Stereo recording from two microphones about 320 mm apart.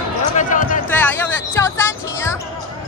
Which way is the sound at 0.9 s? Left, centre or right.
Centre.